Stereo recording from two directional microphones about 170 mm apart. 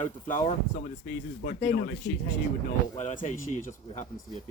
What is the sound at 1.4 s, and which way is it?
Speech, 55° left (ahead or behind).